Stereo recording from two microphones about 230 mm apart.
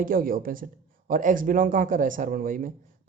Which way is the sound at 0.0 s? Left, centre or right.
Right.